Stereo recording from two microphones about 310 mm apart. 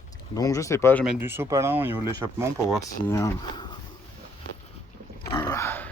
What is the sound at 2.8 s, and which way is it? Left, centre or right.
Speech, centre.